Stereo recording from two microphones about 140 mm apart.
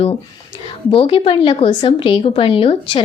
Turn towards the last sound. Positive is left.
turn(degrees=40)  # may be behind; listen again after turning